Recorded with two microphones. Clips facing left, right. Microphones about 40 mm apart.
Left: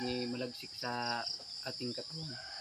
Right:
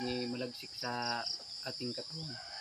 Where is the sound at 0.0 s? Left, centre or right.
Centre.